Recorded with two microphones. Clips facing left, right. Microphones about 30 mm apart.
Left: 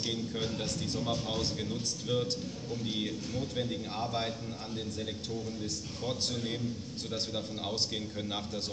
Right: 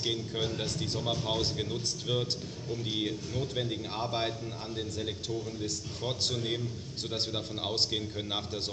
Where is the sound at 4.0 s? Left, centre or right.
Right.